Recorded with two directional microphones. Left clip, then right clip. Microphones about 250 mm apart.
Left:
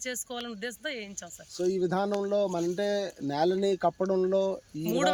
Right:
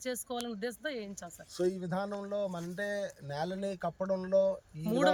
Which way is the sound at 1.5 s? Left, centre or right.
Left.